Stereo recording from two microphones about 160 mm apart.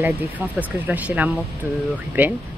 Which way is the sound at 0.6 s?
10° right (ahead or behind).